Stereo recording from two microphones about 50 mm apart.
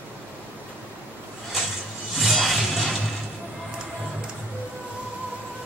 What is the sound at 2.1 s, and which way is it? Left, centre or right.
Music, centre.